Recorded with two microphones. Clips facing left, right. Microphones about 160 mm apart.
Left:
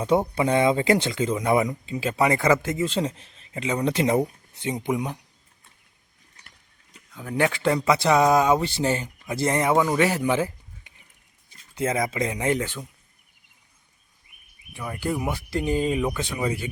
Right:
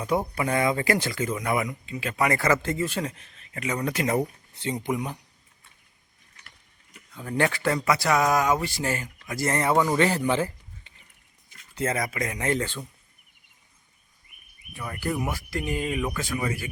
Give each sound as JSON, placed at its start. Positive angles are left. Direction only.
{"t": 0.0, "sound": "speech", "side_deg": 25}
{"t": 7.1, "sound": "speech", "side_deg": 5}
{"t": 7.3, "sound": "speech", "side_deg": 15}
{"t": 14.8, "sound": "speech", "side_deg": 15}
{"t": 15.4, "sound": "speech", "side_deg": 30}